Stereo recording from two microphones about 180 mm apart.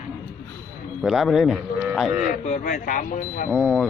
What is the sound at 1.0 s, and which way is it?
Speech, centre (ahead or behind).